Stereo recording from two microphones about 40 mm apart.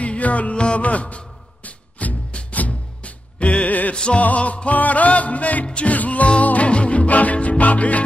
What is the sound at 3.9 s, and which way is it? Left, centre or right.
Music, left.